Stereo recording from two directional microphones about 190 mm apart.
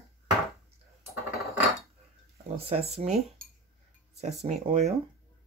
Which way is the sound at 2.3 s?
30° right (ahead or behind).